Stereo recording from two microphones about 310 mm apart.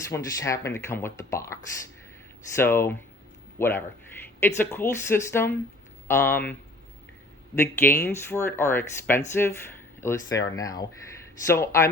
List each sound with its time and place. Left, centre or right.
0.1 s speech: centre
2.6 s speech: centre